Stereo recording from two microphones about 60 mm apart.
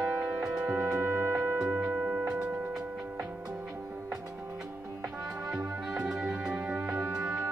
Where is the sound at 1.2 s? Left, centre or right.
Right; by 2.8 s centre.